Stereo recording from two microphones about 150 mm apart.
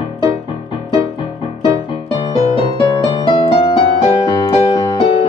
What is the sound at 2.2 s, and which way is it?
Music, 35° left (ahead or behind).